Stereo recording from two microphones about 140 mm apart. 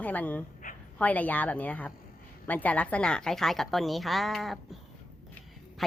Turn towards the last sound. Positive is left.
turn(degrees=0)  # may be behind; listen again after turning